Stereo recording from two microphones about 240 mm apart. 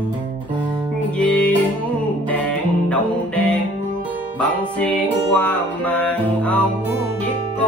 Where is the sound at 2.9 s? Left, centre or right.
Centre.